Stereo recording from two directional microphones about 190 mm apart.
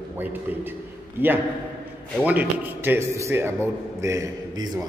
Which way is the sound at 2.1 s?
10° right (ahead or behind).